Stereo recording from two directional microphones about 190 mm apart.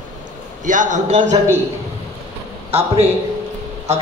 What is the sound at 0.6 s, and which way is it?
Speech, 40° right (ahead or behind).